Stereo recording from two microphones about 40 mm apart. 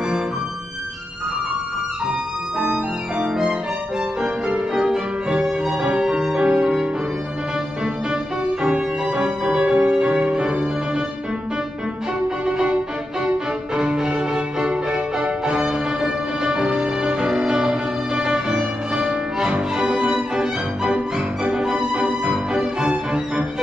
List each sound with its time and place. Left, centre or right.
4.2 s violin: centre
8.6 s music: right
12.4 s music: right
15.4 s music: right